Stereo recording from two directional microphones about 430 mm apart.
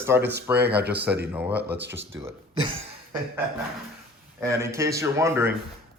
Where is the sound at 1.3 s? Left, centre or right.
Centre.